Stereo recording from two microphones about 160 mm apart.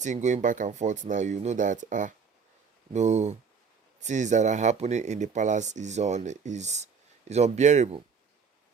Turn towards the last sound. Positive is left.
turn(degrees=-50)  # may be behind; listen again after turning